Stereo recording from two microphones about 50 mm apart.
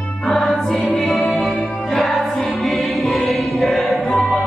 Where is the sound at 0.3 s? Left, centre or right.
Centre.